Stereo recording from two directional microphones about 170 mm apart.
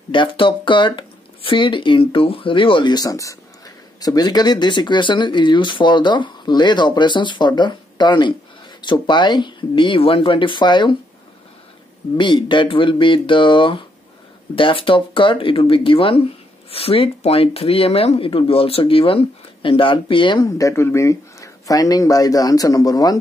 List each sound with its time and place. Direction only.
0.1 s speech: 30° left (ahead or behind)
12.2 s speech: 30° left (ahead or behind)